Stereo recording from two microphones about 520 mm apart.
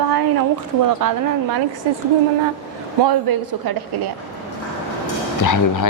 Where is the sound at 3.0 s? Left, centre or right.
Right.